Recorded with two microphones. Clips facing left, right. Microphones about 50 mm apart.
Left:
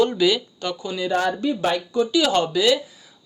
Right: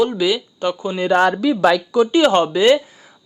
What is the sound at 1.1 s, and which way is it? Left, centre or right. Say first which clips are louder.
Speech: right 7 dB; right.